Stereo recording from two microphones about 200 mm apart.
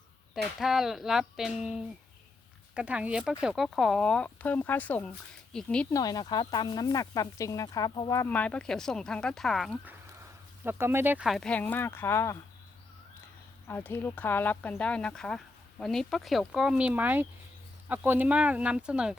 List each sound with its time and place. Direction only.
0.6 s speech: centre (ahead or behind)
5.9 s speech: 20° left (ahead or behind); by 9.9 s centre (ahead or behind)
10.6 s speech: 10° right (ahead or behind); by 12.4 s 15° left (ahead or behind)
13.7 s speech: 10° left (ahead or behind)